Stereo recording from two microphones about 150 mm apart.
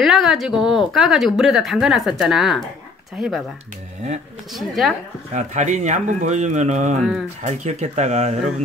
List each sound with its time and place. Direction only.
0.0 s a woman's voice: centre (ahead or behind)
4.6 s a woman's voice: centre (ahead or behind)
5.3 s speech: 55° right (ahead or behind)